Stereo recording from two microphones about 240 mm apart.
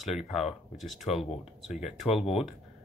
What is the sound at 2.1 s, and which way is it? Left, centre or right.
Speech, left.